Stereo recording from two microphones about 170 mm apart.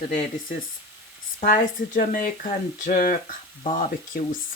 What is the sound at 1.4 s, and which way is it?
Speech, 50° left (ahead or behind).